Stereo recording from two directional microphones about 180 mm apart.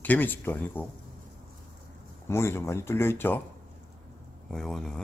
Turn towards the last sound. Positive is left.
turn(degrees=0)  # may be behind; listen again after turning